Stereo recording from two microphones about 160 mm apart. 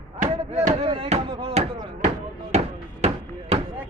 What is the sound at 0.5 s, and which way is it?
Chop, 40° right (ahead or behind).